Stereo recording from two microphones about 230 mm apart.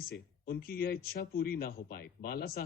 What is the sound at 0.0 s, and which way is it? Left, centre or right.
Speech, left.